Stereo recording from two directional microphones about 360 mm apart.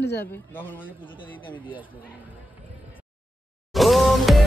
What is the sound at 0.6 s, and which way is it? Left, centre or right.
Speech, centre.